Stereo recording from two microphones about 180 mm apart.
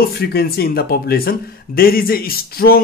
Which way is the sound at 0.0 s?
60° left (ahead or behind).